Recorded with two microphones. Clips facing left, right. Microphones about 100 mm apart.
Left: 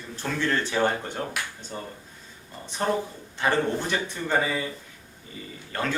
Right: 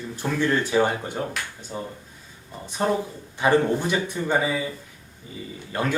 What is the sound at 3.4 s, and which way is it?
Speech, 15° right (ahead or behind).